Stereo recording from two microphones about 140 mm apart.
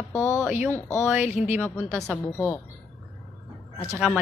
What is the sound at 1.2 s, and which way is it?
Speech, 50° left (ahead or behind).